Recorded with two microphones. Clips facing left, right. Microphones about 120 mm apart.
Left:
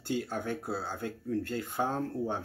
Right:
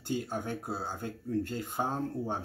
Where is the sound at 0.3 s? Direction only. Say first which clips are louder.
Left 1 dB; 15° right (ahead or behind).